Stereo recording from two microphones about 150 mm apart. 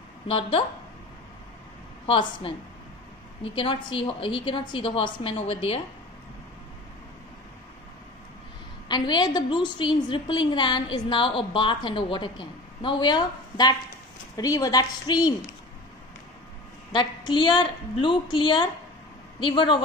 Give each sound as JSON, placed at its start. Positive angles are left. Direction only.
{"t": 0.3, "sound": "a woman's voice", "side_deg": 35}
{"t": 2.0, "sound": "a woman's voice", "side_deg": 35}
{"t": 3.5, "sound": "a woman's voice", "side_deg": 35}
{"t": 8.8, "sound": "a woman's voice", "side_deg": 30}
{"t": 16.9, "sound": "a woman's voice", "side_deg": 30}